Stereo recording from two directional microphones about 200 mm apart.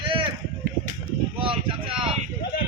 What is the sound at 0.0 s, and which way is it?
Run, 25° right (ahead or behind).